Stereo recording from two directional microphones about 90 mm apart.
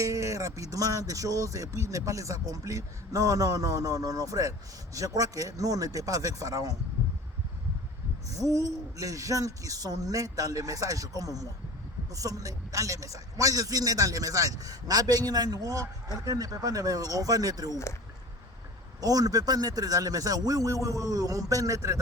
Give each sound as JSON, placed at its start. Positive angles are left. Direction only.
{"t": 0.0, "sound": "speech", "side_deg": -35}
{"t": 8.3, "sound": "a man's voice", "side_deg": -40}
{"t": 17.7, "sound": "speech", "side_deg": 30}
{"t": 18.9, "sound": "a man's voice", "side_deg": -45}